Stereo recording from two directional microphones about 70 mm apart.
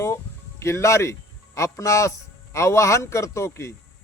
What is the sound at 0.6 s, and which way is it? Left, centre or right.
Speech, left.